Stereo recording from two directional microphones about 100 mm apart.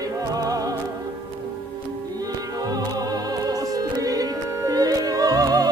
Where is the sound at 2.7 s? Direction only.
40° right (ahead or behind).